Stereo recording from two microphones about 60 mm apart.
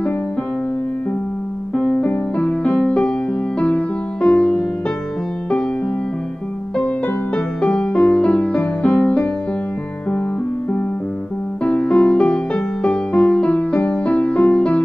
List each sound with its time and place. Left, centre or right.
1.8 s piano: centre
2.3 s music: left
7.3 s music: centre
11.6 s music: left